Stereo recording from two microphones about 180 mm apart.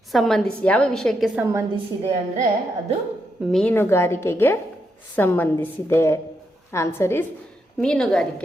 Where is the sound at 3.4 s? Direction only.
Centre (ahead or behind).